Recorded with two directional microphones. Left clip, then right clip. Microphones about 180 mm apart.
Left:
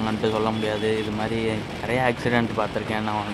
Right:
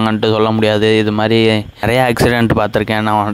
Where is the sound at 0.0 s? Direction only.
45° right (ahead or behind).